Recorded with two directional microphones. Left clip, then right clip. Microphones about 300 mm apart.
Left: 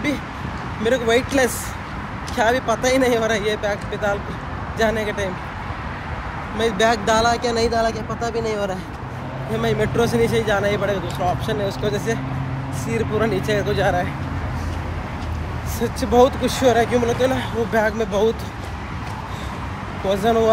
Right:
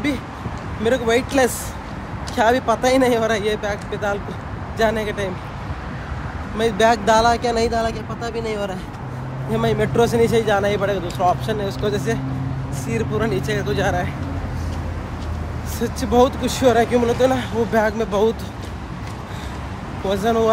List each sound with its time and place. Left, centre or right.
0.8 s speech: centre
6.6 s speech: centre
15.8 s speech: centre
20.1 s speech: centre